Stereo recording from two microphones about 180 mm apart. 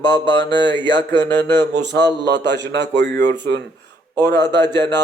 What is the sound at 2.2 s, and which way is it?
Speech, 75° right (ahead or behind).